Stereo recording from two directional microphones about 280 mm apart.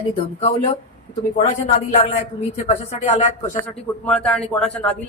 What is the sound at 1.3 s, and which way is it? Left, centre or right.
Speech, left.